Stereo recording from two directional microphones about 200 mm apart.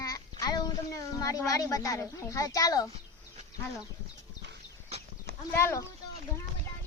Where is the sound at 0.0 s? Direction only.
15° left (ahead or behind).